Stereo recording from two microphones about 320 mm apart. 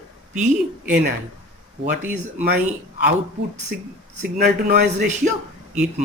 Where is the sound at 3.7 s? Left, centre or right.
Right.